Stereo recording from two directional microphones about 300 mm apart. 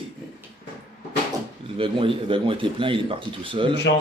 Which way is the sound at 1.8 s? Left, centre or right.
Centre.